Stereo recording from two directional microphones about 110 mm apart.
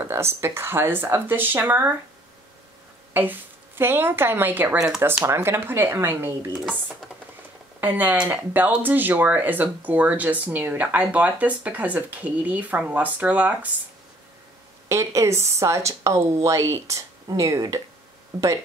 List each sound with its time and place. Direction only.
0.0 s a woman's voice: 25° right (ahead or behind)
3.1 s a woman's voice: 20° right (ahead or behind)
4.7 s speech: 5° right (ahead or behind)
5.0 s a woman's voice: 20° right (ahead or behind)
7.8 s speech: 15° right (ahead or behind)
14.9 s a woman's voice: 25° right (ahead or behind)